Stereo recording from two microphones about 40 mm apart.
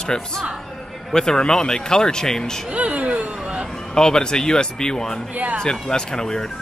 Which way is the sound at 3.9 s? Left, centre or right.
Centre.